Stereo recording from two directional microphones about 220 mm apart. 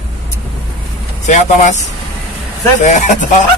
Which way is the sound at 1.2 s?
35° left (ahead or behind).